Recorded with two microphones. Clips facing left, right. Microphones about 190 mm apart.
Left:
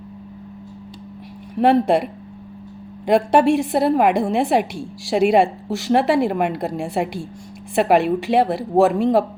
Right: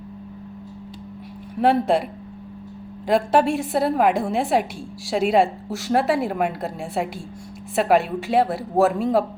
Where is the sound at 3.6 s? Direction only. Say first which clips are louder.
Left 3 dB; centre (ahead or behind).